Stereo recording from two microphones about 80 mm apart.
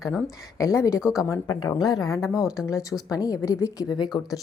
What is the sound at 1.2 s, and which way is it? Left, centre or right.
Speech, left.